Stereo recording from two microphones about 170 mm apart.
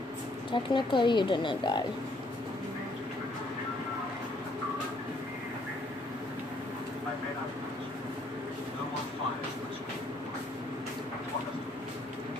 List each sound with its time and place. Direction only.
0.5 s speech: 30° left (ahead or behind)